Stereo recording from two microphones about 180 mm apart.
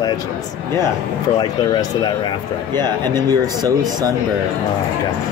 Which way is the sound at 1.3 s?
25° left (ahead or behind).